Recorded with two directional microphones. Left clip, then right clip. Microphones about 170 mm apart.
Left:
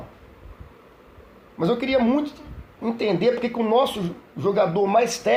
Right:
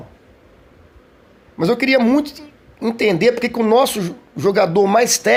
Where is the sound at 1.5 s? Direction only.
60° right (ahead or behind).